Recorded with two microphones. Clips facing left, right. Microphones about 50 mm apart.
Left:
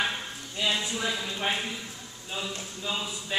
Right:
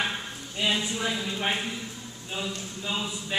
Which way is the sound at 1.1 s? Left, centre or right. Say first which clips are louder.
Right 1 dB; centre.